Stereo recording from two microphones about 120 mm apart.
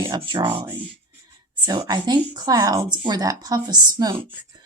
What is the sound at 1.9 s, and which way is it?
Speech, 35° right (ahead or behind).